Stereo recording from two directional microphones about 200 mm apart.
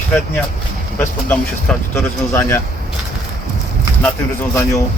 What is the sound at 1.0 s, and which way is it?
Speech, 10° left (ahead or behind).